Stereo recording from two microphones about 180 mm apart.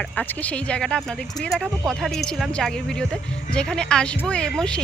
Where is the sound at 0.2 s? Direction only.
5° left (ahead or behind).